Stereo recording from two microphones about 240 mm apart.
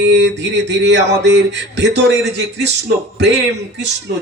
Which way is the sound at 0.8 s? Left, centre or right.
Right.